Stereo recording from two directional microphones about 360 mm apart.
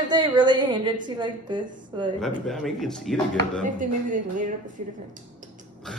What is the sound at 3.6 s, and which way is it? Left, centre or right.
Speech, right.